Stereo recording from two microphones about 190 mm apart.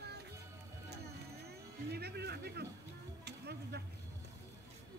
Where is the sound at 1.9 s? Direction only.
60° right (ahead or behind).